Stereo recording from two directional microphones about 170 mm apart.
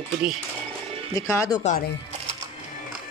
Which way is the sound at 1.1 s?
20° left (ahead or behind).